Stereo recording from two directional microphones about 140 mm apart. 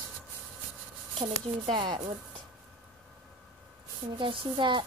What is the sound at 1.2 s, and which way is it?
Speech, 40° right (ahead or behind).